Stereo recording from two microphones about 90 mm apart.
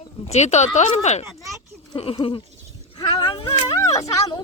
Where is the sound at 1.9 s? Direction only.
80° left.